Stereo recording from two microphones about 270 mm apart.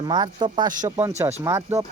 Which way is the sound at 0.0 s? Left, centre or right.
Centre.